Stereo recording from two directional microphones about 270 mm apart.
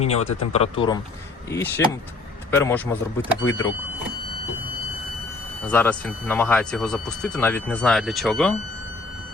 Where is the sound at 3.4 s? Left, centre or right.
Left.